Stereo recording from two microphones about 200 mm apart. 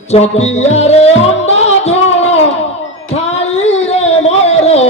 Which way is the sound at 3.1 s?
30° left (ahead or behind).